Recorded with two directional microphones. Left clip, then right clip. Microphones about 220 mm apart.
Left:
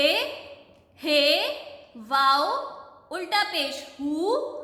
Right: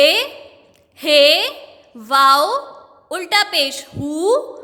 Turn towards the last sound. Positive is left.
turn(degrees=-45)  # may be behind; listen again after turning